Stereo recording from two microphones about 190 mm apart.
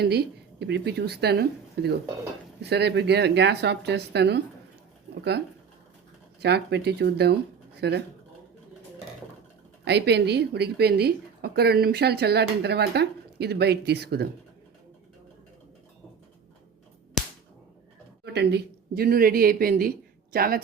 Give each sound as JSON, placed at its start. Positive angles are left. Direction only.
{"t": 0.0, "sound": "a woman's voice", "side_deg": -55}
{"t": 6.4, "sound": "a woman's voice", "side_deg": -60}
{"t": 9.8, "sound": "a woman's voice", "side_deg": -60}
{"t": 17.2, "sound": "whip", "side_deg": 0}
{"t": 18.3, "sound": "a woman's voice", "side_deg": -55}